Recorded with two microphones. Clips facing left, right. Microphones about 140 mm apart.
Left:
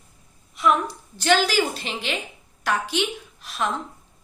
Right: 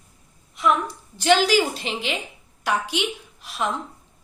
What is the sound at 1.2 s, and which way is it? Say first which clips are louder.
A woman's voice: right 2 dB; 20° right (ahead or behind).